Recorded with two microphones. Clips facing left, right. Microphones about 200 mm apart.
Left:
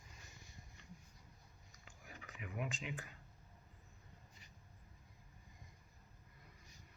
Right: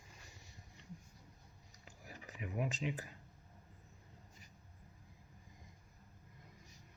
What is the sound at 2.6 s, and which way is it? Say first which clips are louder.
Speech: right 5 dB; 35° right (ahead or behind).